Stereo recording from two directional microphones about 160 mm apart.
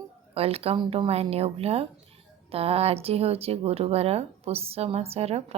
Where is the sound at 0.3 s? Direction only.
40° right (ahead or behind).